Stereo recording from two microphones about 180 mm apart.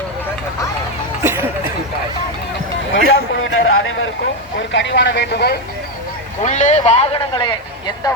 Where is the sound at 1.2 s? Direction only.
10° right (ahead or behind).